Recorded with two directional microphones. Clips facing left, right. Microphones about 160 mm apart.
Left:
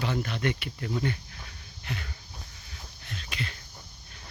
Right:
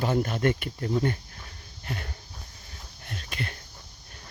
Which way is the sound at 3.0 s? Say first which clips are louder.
Right 2 dB; 50° right (ahead or behind).